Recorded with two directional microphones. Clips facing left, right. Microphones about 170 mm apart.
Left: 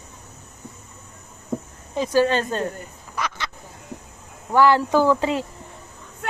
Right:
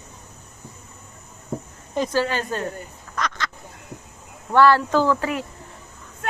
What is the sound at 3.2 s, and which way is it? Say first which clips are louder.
Quack: right 1 dB; 10° left (ahead or behind).